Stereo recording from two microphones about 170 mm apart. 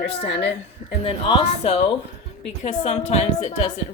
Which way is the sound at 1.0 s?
35° left (ahead or behind).